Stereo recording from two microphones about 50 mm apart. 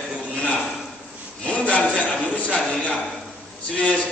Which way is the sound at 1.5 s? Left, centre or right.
Left.